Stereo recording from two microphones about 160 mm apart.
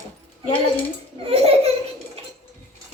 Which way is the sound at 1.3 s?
35° right (ahead or behind).